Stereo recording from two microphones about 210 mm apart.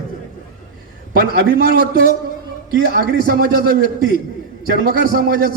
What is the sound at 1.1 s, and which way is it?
A man's voice, 45° right (ahead or behind).